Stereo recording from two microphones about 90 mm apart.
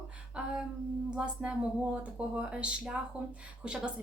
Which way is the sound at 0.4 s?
10° right (ahead or behind).